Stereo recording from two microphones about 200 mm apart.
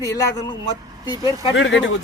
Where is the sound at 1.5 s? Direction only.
70° left (ahead or behind).